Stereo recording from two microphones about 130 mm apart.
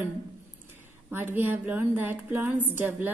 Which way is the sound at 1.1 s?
15° right (ahead or behind).